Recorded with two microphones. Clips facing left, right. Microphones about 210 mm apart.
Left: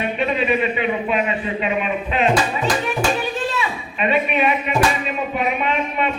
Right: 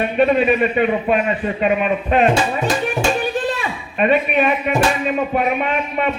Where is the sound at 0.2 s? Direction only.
50° right (ahead or behind).